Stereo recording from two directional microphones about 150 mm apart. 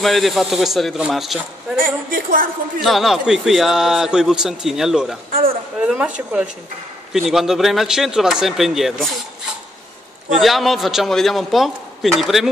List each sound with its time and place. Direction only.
0.0 s a man's voice: centre (ahead or behind)
1.8 s a woman's voice: 70° right (ahead or behind)
2.8 s a man's voice: centre (ahead or behind)
5.8 s a sound: 5° right (ahead or behind)
7.1 s a man's voice: centre (ahead or behind)
10.4 s a man's voice: centre (ahead or behind)